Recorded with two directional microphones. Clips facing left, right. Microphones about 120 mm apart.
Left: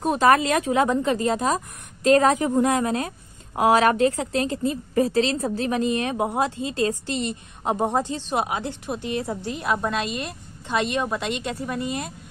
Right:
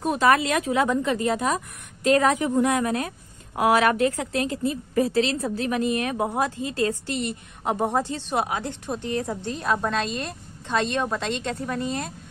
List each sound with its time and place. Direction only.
0.0 s a woman's voice: 35° left (ahead or behind); by 12.1 s 5° left (ahead or behind)